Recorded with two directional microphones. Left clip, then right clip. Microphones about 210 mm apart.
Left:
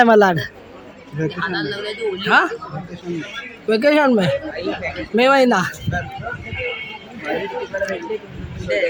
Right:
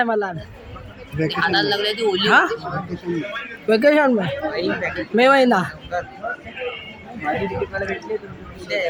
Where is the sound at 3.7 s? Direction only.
5° right (ahead or behind).